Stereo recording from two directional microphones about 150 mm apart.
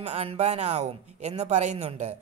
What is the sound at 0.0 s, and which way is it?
Speech, 45° right (ahead or behind).